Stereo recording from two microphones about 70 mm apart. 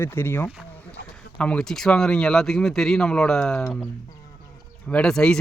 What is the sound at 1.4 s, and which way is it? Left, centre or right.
Speech, centre.